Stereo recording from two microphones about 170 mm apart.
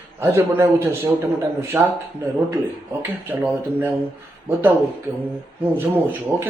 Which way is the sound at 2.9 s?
10° right (ahead or behind).